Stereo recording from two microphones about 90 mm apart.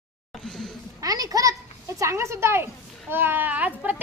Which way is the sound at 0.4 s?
5° left (ahead or behind).